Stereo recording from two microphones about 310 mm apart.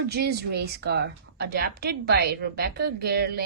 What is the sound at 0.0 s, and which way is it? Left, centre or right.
A woman's voice, right.